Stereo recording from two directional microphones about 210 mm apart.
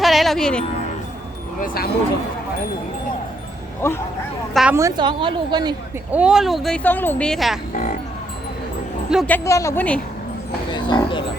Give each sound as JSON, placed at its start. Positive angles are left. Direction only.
{"t": 0.0, "sound": "music", "side_deg": 0}
{"t": 1.6, "sound": "speech", "side_deg": 45}
{"t": 3.8, "sound": "a woman's voice", "side_deg": 10}
{"t": 4.5, "sound": "speech", "side_deg": -5}
{"t": 4.8, "sound": "a woman's voice", "side_deg": -20}
{"t": 6.1, "sound": "speech", "side_deg": -5}
{"t": 9.0, "sound": "speech", "side_deg": -5}
{"t": 9.3, "sound": "a woman's voice", "side_deg": 15}
{"t": 10.7, "sound": "speech", "side_deg": 20}